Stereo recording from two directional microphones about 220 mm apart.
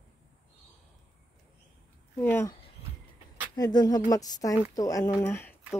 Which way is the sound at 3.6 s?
20° left (ahead or behind).